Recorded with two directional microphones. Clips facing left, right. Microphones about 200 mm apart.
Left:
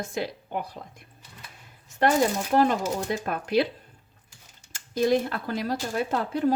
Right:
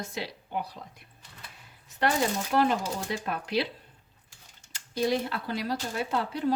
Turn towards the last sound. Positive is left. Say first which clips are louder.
# left 4 dB
turn(degrees=45)  # may be behind; listen again after turning